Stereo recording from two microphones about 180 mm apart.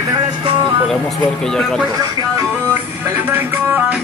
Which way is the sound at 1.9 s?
20° right (ahead or behind).